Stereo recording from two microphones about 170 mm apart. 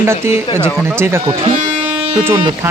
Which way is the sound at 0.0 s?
15° right (ahead or behind).